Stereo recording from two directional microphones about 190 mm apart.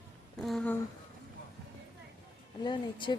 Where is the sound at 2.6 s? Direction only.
25° left (ahead or behind).